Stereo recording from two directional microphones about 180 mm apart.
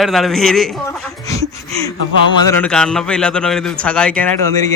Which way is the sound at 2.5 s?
10° left (ahead or behind).